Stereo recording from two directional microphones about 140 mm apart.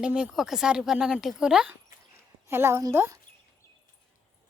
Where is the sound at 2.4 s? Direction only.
15° right (ahead or behind).